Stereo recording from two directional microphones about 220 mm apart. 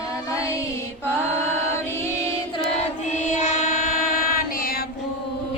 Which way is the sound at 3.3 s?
35° left (ahead or behind).